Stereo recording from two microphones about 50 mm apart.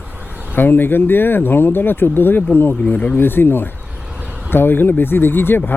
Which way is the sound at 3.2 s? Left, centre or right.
Left.